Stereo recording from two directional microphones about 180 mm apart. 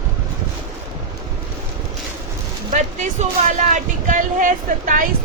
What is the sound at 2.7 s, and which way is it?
Speech, 45° right (ahead or behind).